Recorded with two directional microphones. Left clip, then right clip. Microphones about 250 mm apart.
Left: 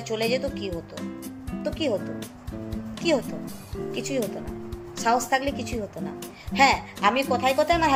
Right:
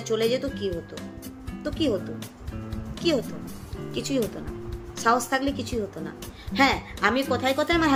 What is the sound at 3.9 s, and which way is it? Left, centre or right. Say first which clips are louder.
Speech: right 1 dB; centre.